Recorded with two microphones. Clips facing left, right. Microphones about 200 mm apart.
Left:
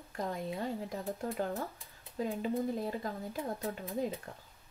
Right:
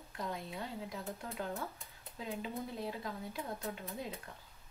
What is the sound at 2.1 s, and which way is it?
Speech, 50° left (ahead or behind).